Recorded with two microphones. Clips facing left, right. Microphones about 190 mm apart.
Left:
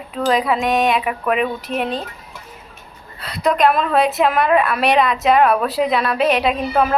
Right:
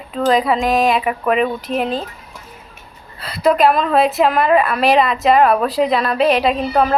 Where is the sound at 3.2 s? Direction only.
Centre (ahead or behind).